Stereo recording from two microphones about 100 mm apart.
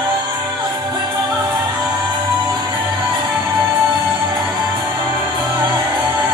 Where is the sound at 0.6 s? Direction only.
45° right (ahead or behind).